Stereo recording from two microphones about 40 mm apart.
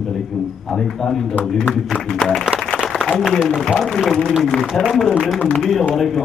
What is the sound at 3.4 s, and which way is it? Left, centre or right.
A man's voice, centre.